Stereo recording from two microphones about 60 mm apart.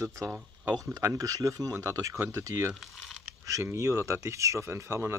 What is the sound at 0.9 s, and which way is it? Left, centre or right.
Speech, right.